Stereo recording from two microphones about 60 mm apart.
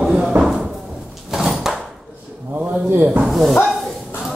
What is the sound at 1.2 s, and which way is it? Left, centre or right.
Door, centre.